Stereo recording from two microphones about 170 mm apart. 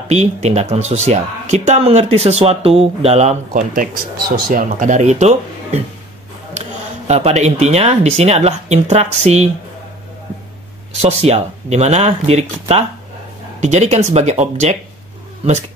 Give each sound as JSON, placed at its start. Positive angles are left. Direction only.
{"t": 0.1, "sound": "speech", "side_deg": -40}
{"t": 7.1, "sound": "speech", "side_deg": -40}
{"t": 11.0, "sound": "speech", "side_deg": -40}